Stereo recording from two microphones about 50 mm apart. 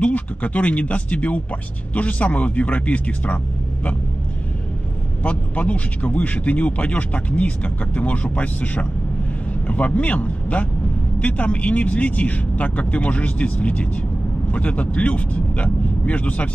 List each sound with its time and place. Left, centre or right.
0.0 s speech: left
5.2 s speech: left